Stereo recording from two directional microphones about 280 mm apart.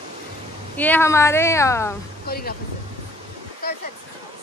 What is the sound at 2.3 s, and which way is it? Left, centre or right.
Speech, left.